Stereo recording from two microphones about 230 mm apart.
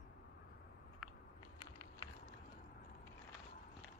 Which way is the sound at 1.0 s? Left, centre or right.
Centre.